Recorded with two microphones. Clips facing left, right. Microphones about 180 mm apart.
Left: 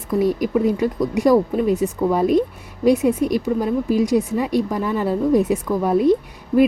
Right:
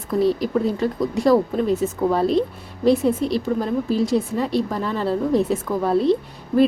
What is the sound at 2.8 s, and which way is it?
Speech, 15° left (ahead or behind).